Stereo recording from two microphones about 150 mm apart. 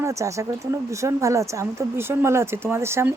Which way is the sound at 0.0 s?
20° right (ahead or behind).